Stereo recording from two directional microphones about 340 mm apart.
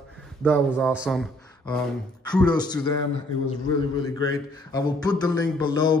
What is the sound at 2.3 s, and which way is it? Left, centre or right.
Speech, centre.